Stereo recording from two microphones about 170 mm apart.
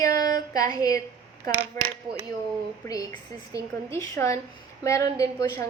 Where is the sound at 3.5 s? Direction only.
15° left (ahead or behind).